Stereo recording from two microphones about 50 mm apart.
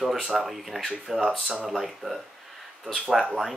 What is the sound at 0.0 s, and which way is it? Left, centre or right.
Speech, centre.